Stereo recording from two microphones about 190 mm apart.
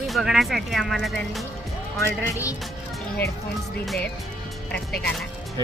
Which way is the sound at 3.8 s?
Centre (ahead or behind).